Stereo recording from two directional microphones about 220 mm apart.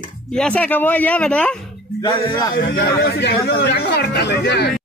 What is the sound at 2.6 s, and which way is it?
Speech, 50° left (ahead or behind).